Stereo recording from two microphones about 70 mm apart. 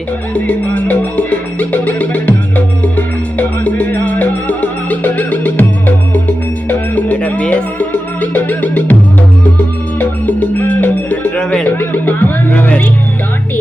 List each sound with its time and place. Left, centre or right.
0.3 s music: left
10.0 s music: left
11.3 s music: centre